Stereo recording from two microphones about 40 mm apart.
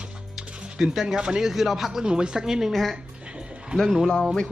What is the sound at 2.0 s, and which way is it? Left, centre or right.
Speech, right.